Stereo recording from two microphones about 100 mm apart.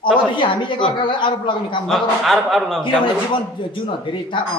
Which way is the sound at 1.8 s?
Centre (ahead or behind).